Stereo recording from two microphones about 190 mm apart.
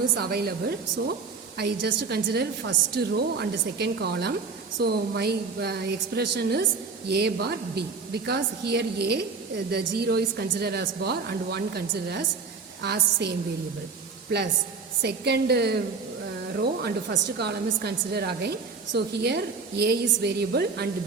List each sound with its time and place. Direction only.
0.2 s a woman's voice: 55° right (ahead or behind)
15.0 s a woman's voice: 60° right (ahead or behind)
16.8 s a woman's voice: 60° right (ahead or behind)